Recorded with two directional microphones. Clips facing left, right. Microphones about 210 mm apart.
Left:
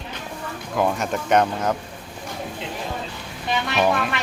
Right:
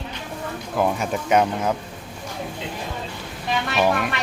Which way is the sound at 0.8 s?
5° right (ahead or behind).